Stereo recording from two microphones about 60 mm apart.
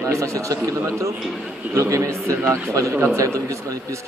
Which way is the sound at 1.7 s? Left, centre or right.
Right.